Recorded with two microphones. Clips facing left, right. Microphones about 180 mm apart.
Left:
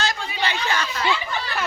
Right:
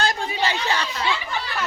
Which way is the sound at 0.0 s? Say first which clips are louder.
Right 3 dB; 50° right (ahead or behind).